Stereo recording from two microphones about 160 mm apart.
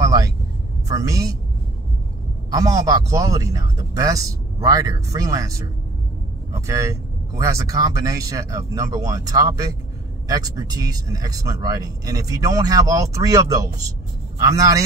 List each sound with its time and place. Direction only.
0.0 s vehicle: 20° right (ahead or behind)
0.8 s speech: 20° right (ahead or behind)
2.5 s speech: 20° right (ahead or behind)